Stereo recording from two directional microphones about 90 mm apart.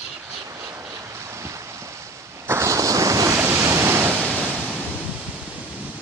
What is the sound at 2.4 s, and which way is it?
Waves, 30° right (ahead or behind).